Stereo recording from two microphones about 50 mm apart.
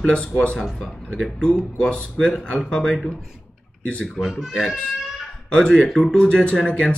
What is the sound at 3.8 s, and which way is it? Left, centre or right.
Speech, left.